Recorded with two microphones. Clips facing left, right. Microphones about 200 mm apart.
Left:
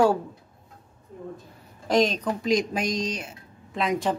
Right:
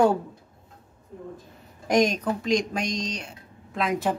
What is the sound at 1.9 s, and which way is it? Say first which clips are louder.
Speech: even; 15° right (ahead or behind).